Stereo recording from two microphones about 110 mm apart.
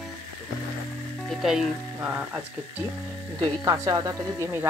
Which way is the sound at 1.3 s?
5° right (ahead or behind).